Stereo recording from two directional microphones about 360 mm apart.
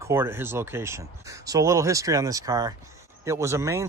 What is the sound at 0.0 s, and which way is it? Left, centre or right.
Speech, centre.